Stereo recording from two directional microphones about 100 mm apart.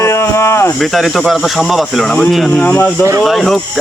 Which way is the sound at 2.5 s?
15° left (ahead or behind).